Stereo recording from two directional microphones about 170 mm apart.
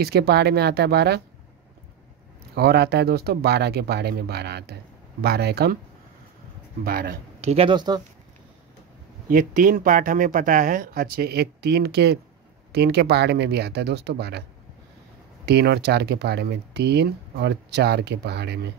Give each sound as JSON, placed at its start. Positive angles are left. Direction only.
{"t": 0.0, "sound": "speech", "side_deg": -70}
{"t": 2.5, "sound": "speech", "side_deg": -70}
{"t": 6.8, "sound": "speech", "side_deg": -60}
{"t": 7.3, "sound": "speech", "side_deg": -40}
{"t": 9.3, "sound": "speech", "side_deg": -55}
{"t": 15.4, "sound": "speech", "side_deg": -80}